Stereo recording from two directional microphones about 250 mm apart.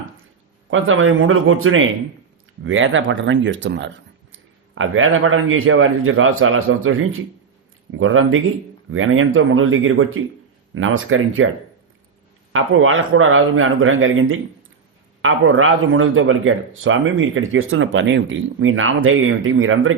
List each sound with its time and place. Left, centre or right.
0.7 s a man's voice: right
12.5 s a man's voice: right